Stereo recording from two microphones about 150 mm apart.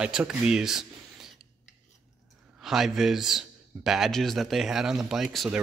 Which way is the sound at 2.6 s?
Centre (ahead or behind).